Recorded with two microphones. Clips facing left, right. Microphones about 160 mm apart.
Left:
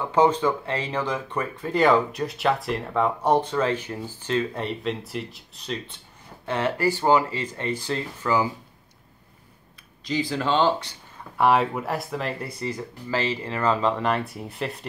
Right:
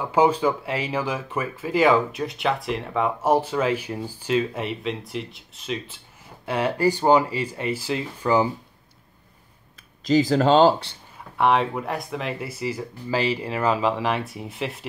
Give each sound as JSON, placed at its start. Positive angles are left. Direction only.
{"t": 0.0, "sound": "speech", "side_deg": -10}
{"t": 10.0, "sound": "speech", "side_deg": -40}
{"t": 11.3, "sound": "speech", "side_deg": 0}